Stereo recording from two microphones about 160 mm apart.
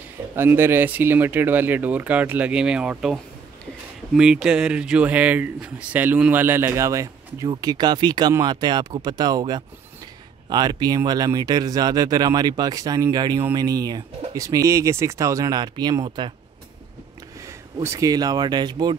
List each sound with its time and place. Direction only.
0.4 s speech: 15° right (ahead or behind)
17.5 s speech: 20° right (ahead or behind)